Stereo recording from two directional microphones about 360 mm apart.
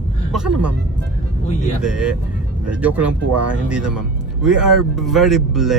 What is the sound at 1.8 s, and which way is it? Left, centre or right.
Speech, centre.